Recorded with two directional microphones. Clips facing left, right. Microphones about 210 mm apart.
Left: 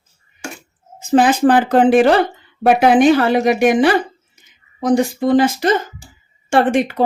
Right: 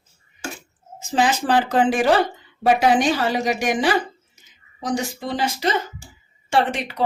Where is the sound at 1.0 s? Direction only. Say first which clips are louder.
Left 8 dB; 55° left (ahead or behind).